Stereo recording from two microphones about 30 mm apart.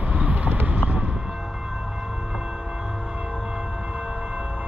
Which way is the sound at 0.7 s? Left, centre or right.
Right.